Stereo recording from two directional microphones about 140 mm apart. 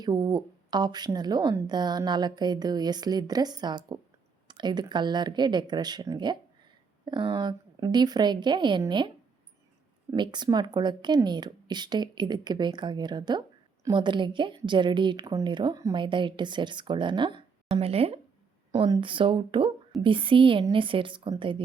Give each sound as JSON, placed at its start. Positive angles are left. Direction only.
{"t": 0.0, "sound": "a woman's voice", "side_deg": -30}